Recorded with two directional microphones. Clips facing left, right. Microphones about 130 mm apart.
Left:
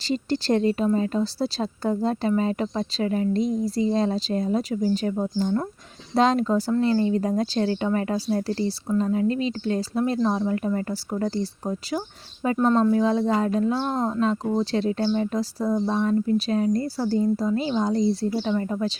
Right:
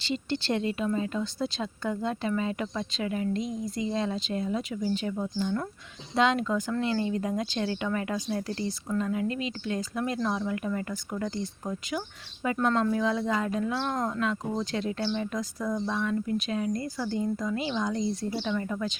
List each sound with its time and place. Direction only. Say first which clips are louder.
0.0 s speech: left 6 dB; 40° left (ahead or behind)